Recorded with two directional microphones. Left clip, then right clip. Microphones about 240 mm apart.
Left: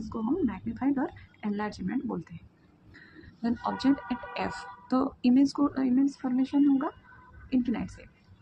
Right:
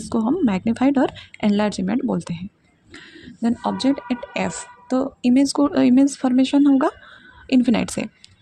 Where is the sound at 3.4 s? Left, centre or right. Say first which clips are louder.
Right 7 dB; right.